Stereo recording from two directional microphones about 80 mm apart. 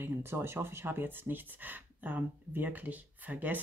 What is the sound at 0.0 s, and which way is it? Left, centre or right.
Speech, right.